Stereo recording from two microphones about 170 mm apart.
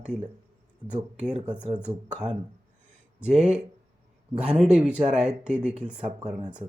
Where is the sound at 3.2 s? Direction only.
5° right (ahead or behind).